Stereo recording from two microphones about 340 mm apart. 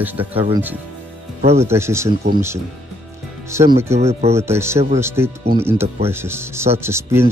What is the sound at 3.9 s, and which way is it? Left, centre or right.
Speech, centre.